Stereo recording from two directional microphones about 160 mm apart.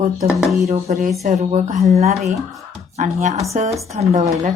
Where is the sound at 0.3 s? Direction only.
Centre (ahead or behind).